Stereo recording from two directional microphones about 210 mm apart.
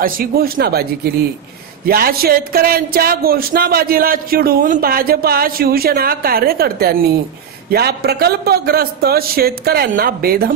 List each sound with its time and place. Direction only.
0.0 s speech: 45° right (ahead or behind)